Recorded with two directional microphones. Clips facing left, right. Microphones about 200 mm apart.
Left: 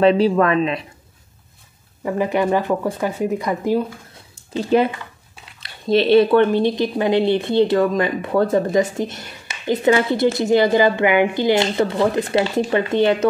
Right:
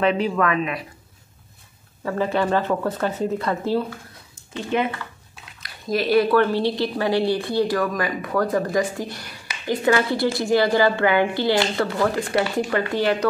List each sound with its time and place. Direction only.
0.0 s speech: 35° left (ahead or behind)
2.0 s speech: 15° left (ahead or behind)
4.6 s a woman's voice: 35° left (ahead or behind)